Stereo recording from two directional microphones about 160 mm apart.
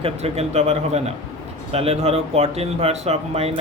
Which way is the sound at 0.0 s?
40° right (ahead or behind).